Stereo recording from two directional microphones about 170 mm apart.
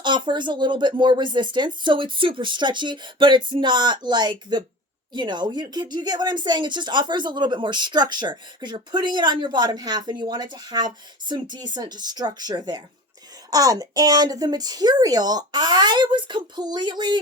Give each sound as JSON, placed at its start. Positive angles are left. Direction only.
{"t": 0.0, "sound": "speech", "side_deg": -25}